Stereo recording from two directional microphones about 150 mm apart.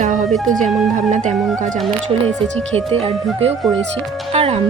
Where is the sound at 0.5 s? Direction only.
60° right (ahead or behind).